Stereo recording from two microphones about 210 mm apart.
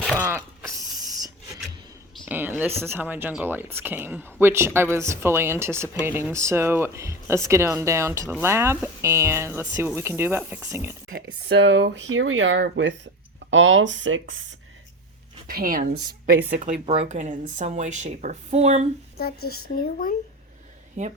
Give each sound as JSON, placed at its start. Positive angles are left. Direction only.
{"t": 0.2, "sound": "a sound", "side_deg": -15}
{"t": 2.2, "sound": "speech", "side_deg": -10}
{"t": 11.1, "sound": "speech", "side_deg": -55}
{"t": 15.4, "sound": "speech", "side_deg": -45}
{"t": 16.0, "sound": "a woman's voice", "side_deg": -20}
{"t": 19.1, "sound": "speech", "side_deg": 45}